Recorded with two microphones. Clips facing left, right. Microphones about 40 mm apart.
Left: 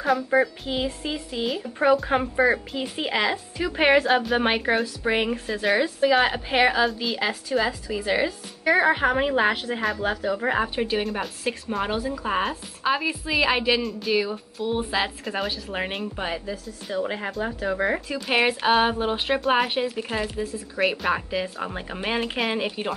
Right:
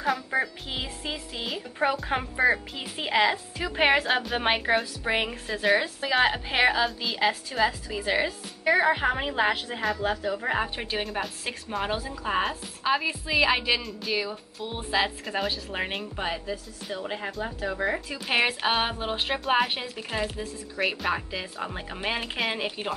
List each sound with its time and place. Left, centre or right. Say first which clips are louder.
0.0 s a woman's voice: left 5 dB; centre
8.6 s a woman's voice: left 3 dB; centre
10.2 s speech: left 4 dB; left
10.5 s a woman's voice: left 4 dB; centre
17.5 s speech: left 4 dB; left
17.9 s a woman's voice: left 3 dB; centre